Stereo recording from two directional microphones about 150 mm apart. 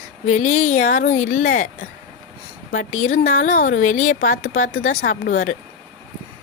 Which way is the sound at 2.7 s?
65° left (ahead or behind).